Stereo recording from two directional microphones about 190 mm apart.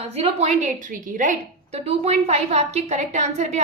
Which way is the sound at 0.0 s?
30° right (ahead or behind).